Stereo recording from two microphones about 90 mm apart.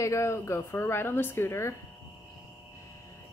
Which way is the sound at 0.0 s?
35° left (ahead or behind).